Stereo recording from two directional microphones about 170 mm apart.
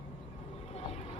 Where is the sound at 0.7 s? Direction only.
35° left (ahead or behind).